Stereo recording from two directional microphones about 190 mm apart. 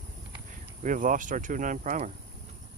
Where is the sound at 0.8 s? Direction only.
45° right (ahead or behind).